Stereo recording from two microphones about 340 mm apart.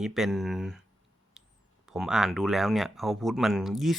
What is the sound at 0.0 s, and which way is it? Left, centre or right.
Speech, centre.